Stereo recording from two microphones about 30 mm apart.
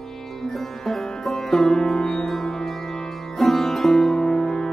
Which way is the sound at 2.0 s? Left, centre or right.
Centre.